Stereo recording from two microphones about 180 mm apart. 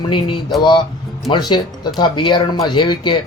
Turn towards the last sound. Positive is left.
turn(degrees=25)  # may be behind; listen again after turning